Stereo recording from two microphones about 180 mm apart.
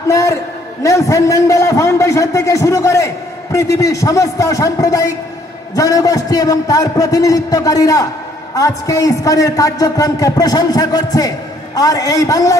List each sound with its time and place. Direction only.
0.1 s a man's voice: 15° left (ahead or behind)